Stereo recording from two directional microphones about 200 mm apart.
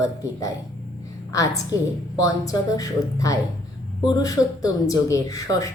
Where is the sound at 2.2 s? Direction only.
20° left (ahead or behind).